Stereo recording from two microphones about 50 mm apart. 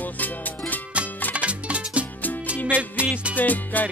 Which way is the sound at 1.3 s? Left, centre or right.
Right.